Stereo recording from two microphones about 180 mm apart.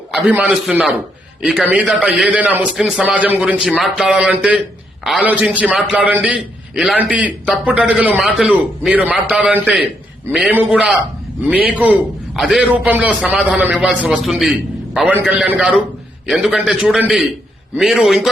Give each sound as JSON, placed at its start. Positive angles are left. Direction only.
{"t": 0.3, "sound": "a man's voice", "side_deg": -10}